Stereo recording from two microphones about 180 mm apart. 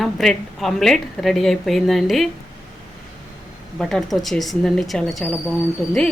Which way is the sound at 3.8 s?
Centre (ahead or behind).